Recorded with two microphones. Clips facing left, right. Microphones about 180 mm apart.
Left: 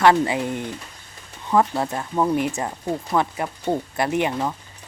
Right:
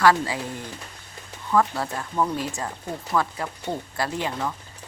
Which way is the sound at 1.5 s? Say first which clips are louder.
Left 3 dB; 20° left (ahead or behind).